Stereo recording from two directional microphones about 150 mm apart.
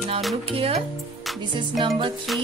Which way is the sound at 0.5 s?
40° right (ahead or behind).